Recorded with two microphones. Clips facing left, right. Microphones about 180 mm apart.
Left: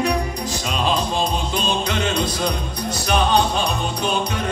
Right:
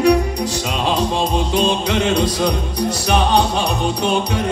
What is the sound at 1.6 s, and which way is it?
Music, 75° right (ahead or behind).